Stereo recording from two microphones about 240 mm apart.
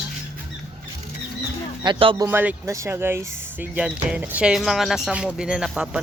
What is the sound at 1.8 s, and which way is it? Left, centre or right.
Speech, right.